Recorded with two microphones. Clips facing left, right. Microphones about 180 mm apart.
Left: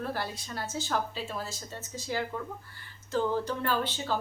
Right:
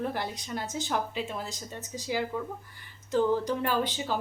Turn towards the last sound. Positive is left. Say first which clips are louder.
# right 1 dB
turn(degrees=-15)  # may be behind; listen again after turning